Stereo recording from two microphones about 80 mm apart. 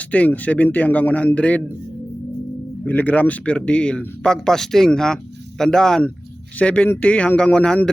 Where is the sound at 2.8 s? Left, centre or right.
Centre.